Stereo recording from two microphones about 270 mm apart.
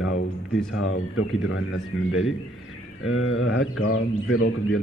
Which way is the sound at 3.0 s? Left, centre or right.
Left.